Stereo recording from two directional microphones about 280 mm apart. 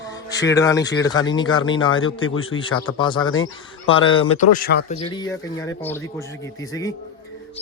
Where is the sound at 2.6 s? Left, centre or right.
Centre.